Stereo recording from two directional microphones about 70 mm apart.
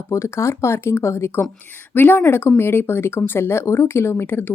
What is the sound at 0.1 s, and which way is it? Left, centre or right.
Speech, left.